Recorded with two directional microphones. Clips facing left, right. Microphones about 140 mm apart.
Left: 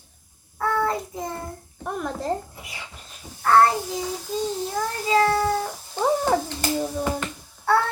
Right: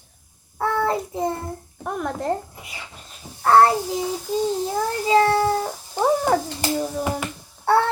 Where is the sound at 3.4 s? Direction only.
30° right (ahead or behind).